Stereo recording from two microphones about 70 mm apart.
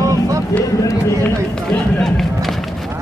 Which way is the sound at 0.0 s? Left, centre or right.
Right.